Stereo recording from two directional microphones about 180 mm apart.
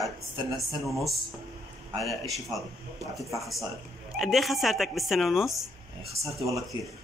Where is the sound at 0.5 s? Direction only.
Centre (ahead or behind).